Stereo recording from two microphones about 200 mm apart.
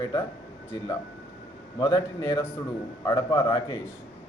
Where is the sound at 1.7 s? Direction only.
15° left (ahead or behind).